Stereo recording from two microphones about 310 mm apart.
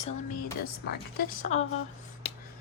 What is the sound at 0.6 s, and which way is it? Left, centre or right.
A woman's voice, left.